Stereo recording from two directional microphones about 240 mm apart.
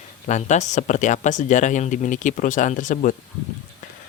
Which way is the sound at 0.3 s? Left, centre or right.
Left.